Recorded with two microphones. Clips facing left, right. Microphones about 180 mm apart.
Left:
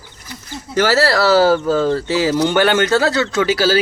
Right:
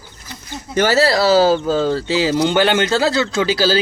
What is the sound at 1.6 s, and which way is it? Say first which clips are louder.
Speech: left 1 dB; 30° right (ahead or behind).